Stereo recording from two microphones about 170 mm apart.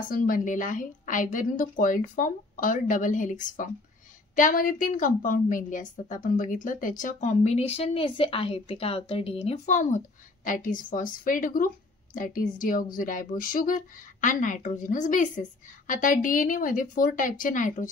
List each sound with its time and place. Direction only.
0.1 s a woman's voice: 55° left (ahead or behind)